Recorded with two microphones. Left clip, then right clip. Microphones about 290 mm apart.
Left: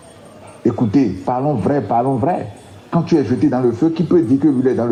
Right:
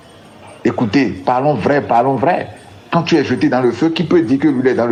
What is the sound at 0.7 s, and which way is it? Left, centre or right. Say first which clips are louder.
A man's voice: right 1 dB; right.